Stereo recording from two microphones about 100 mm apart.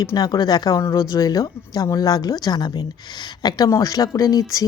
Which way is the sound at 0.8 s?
30° left (ahead or behind).